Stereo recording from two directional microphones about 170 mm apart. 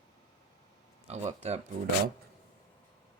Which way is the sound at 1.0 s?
40° right (ahead or behind).